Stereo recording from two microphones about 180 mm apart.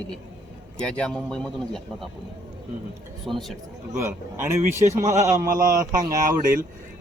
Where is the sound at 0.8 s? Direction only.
5° left (ahead or behind).